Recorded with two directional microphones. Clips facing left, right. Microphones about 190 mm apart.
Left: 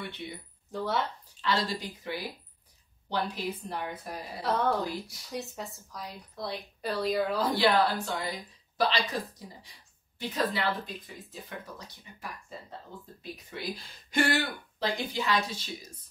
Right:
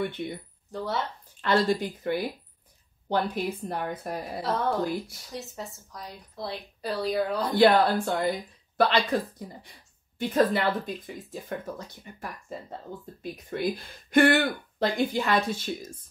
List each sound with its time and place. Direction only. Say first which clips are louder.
0.0 s a woman's voice: right 9 dB; 50° right (ahead or behind)
0.7 s a woman's voice: even; centre (ahead or behind)
1.4 s a woman's voice: right 7 dB; 50° right (ahead or behind)
4.4 s a woman's voice: even; centre (ahead or behind)
7.5 s a woman's voice: right 7 dB; 55° right (ahead or behind)